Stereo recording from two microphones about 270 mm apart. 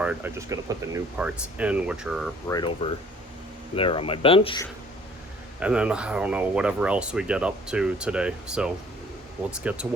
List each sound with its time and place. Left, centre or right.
0.0 s speech: centre
2.5 s speech: centre
5.5 s speech: centre